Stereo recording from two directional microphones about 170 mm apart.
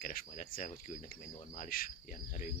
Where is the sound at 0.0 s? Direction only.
55° left (ahead or behind).